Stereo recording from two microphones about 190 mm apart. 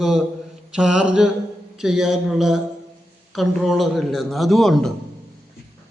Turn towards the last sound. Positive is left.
turn(degrees=0)  # may be behind; listen again after turning